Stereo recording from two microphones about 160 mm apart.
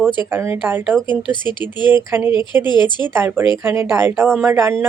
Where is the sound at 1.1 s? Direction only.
30° left (ahead or behind).